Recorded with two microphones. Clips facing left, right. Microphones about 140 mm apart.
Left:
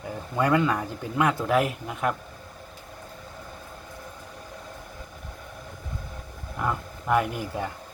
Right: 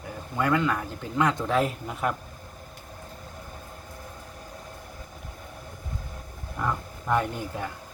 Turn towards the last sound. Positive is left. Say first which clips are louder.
# left 2 dB
turn(degrees=10)  # may be behind; listen again after turning